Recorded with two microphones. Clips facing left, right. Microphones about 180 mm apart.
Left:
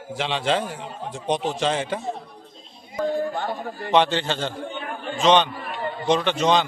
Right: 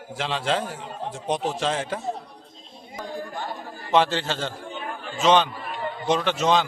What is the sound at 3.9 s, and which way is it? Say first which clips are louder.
A man's voice: left 1 dB; centre (ahead or behind).